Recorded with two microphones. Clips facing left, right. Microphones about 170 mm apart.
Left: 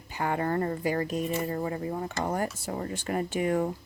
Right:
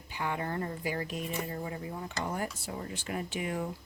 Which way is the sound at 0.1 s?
45° left (ahead or behind).